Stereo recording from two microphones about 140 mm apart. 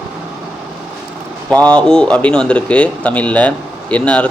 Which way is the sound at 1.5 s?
10° left (ahead or behind).